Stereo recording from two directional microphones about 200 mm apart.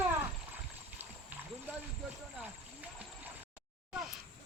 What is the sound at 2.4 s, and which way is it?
Horse, 10° right (ahead or behind).